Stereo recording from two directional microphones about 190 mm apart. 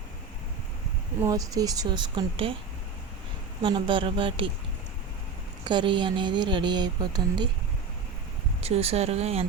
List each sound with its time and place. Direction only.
1.2 s speech: 20° right (ahead or behind)
3.6 s speech: 25° right (ahead or behind)
5.6 s speech: 25° right (ahead or behind)
8.6 s speech: 30° right (ahead or behind)